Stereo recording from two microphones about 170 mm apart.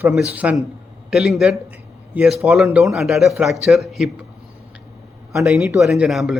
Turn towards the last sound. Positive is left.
turn(degrees=0)  # may be behind; listen again after turning